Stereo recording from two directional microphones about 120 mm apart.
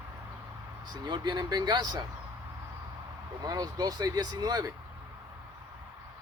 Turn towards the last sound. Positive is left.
turn(degrees=-35)  # may be behind; listen again after turning